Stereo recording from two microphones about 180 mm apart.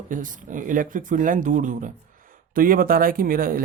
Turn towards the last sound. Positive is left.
turn(degrees=-50)  # may be behind; listen again after turning